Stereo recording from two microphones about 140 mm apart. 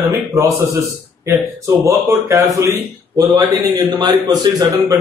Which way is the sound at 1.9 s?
20° right (ahead or behind).